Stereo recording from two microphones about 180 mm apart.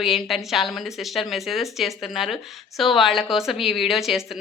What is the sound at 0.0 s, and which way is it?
A woman's voice, centre (ahead or behind).